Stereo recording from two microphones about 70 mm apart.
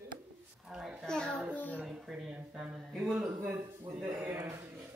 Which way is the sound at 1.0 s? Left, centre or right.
Centre.